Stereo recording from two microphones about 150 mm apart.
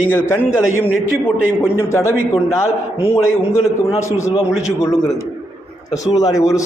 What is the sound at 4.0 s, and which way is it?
Speech, 20° left (ahead or behind).